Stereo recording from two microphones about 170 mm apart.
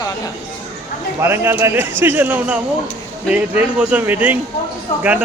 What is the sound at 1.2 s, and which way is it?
A man's voice, 15° right (ahead or behind).